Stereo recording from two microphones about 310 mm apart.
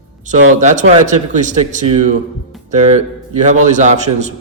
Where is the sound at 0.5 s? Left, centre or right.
Right.